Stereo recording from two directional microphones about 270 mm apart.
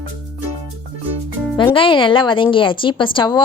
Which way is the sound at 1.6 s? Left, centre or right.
Centre.